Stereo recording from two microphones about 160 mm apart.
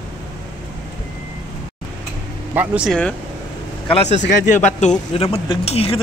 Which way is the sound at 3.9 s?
45° left (ahead or behind).